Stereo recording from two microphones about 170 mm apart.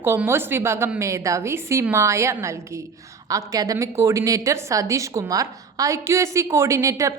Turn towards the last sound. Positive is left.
turn(degrees=-20)  # may be behind; listen again after turning